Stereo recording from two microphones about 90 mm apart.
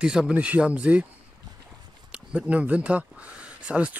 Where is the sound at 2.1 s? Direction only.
15° right (ahead or behind).